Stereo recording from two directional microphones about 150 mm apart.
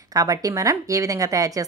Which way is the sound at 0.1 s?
25° right (ahead or behind).